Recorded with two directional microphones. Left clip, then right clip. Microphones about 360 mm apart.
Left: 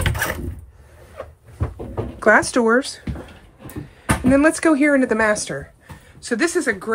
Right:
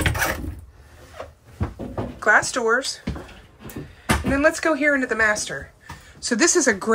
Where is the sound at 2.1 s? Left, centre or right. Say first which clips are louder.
Left 3 dB; centre.